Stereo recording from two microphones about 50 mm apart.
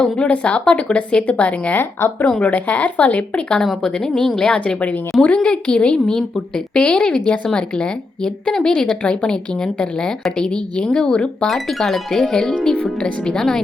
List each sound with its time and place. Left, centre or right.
0.0 s speech: left
1.7 s speech: left
3.8 s a woman's voice: centre
6.1 s a woman's voice: centre
6.8 s a woman's voice: centre
11.4 s a woman's voice: centre